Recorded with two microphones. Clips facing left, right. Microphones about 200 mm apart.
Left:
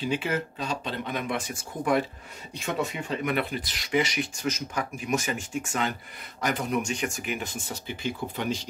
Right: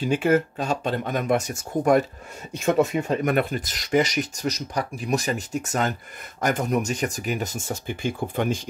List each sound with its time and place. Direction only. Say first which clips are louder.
0.0 s speech: right 8 dB; 50° right (ahead or behind)